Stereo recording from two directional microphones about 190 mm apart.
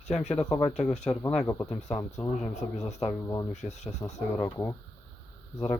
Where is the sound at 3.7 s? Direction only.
35° left (ahead or behind).